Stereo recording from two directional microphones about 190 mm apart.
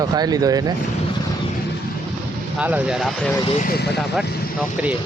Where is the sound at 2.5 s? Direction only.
10° right (ahead or behind).